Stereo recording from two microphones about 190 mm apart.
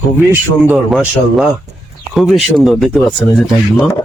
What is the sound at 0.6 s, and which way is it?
Speech, 10° right (ahead or behind).